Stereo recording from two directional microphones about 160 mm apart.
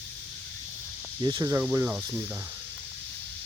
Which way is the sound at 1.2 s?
25° right (ahead or behind).